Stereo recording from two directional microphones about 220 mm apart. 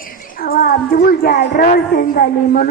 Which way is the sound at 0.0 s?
40° left (ahead or behind).